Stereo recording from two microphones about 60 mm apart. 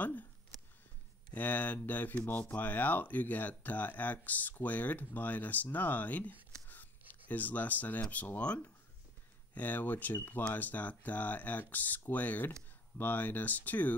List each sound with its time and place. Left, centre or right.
1.3 s speech: left